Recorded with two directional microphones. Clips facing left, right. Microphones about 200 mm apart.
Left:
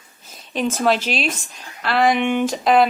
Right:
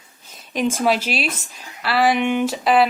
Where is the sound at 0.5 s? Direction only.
10° right (ahead or behind).